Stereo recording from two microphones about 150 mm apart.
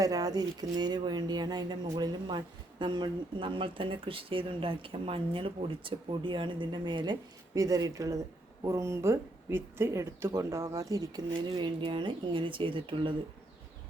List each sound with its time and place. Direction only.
0.0 s speech: 25° right (ahead or behind)